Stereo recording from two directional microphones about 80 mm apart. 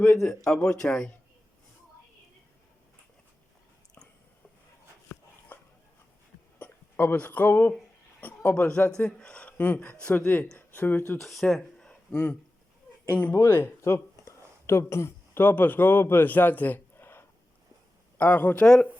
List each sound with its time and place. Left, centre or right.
0.2 s speech: centre
6.6 s speech: left
11.2 s speech: centre
12.1 s speech: centre
13.4 s a sound: left
15.4 s a man's voice: left
18.6 s speech: centre